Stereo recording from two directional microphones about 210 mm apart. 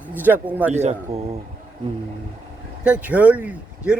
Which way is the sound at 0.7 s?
30° right (ahead or behind).